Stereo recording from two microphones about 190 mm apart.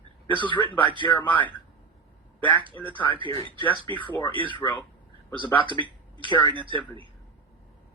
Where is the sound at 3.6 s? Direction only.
25° left (ahead or behind).